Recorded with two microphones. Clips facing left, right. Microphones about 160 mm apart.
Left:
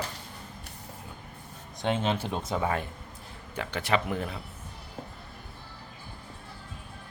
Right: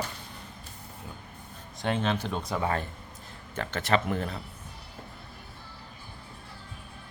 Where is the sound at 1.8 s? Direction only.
20° left (ahead or behind).